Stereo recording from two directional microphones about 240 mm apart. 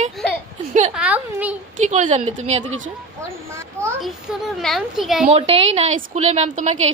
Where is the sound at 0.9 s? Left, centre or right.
Centre.